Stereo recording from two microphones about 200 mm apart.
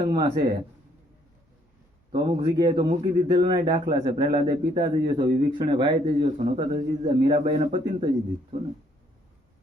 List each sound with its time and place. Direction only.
0.0 s speech: 20° right (ahead or behind)
2.1 s speech: 25° right (ahead or behind)